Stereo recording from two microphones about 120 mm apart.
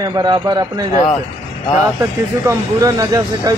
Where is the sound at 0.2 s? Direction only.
35° right (ahead or behind).